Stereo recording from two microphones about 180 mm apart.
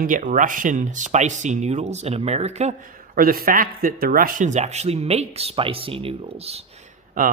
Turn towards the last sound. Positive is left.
turn(degrees=-50)  # may be behind; listen again after turning